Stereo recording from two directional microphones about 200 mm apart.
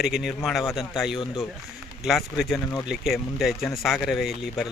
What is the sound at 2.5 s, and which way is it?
Speech, 15° left (ahead or behind).